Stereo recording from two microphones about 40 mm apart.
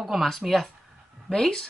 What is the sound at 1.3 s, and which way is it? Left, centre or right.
Speech, centre.